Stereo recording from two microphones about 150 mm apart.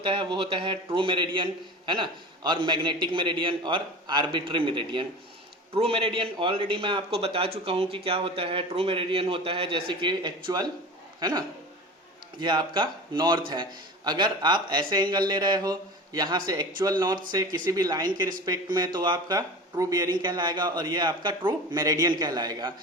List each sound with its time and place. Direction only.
0.0 s a man's voice: 35° right (ahead or behind)